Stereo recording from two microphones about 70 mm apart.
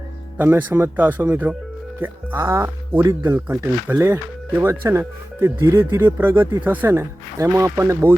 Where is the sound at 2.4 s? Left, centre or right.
Right.